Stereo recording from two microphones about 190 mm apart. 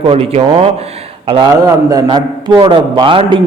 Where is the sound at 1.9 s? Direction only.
20° right (ahead or behind).